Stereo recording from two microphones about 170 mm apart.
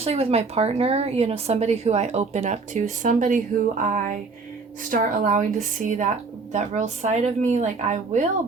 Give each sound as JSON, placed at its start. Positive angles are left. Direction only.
{"t": 0.0, "sound": "a woman's voice", "side_deg": -35}